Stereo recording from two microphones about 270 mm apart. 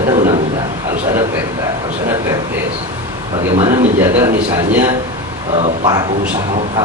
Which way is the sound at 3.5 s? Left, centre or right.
Centre.